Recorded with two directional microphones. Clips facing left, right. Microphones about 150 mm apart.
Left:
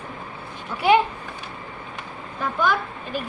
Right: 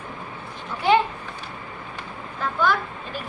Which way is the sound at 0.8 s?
10° left (ahead or behind).